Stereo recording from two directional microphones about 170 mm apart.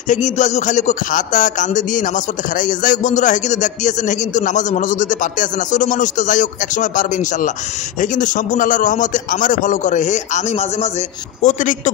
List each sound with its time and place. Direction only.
0.1 s a man's voice: 45° left (ahead or behind)